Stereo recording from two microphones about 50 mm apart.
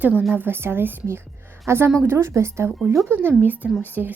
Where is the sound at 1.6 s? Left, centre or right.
Right.